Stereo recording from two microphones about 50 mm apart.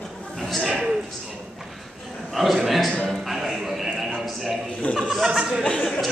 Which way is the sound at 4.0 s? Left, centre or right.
Centre.